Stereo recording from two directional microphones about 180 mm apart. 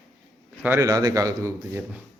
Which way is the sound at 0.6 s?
15° right (ahead or behind).